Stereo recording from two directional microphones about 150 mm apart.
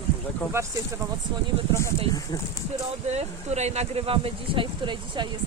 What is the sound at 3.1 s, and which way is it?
Speech, 45° right (ahead or behind).